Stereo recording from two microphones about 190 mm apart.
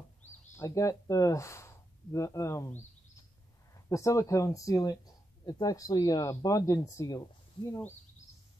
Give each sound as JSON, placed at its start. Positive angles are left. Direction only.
{"t": 0.6, "sound": "speech", "side_deg": 15}
{"t": 3.9, "sound": "speech", "side_deg": 15}